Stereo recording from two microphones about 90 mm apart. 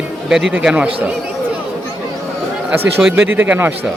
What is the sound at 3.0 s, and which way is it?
Speech, 10° right (ahead or behind).